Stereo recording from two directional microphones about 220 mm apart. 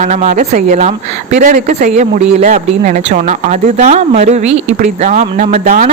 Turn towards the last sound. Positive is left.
turn(degrees=-35)  # may be behind; listen again after turning